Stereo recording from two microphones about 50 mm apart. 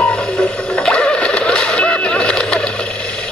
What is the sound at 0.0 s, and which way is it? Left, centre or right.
Music, centre.